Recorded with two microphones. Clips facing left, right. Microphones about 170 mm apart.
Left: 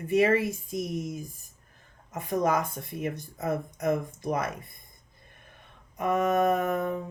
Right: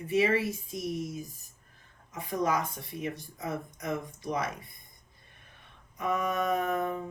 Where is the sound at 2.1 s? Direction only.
50° left (ahead or behind).